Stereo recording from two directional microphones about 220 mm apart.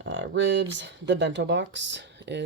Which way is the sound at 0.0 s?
55° right (ahead or behind).